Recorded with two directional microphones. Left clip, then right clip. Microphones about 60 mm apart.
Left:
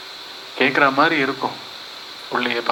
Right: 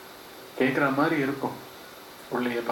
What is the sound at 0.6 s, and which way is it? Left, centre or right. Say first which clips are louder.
Speech: left 8 dB; right.